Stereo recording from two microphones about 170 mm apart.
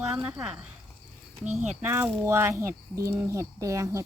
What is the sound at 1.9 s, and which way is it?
Speech, 15° right (ahead or behind).